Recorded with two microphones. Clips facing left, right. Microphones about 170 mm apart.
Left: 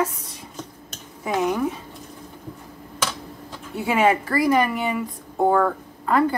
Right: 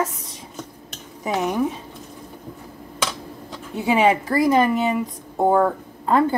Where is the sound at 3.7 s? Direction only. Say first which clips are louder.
Right 2 dB; 20° right (ahead or behind).